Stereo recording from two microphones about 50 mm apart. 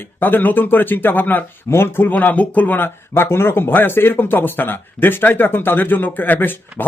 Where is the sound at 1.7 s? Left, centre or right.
Left.